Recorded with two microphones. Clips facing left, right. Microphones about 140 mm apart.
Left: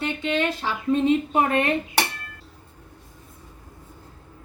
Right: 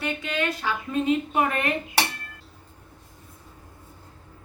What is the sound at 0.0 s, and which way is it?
Speech, 25° left (ahead or behind).